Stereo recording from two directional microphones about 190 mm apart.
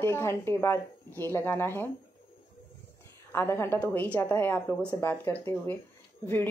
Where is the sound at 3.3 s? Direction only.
10° left (ahead or behind).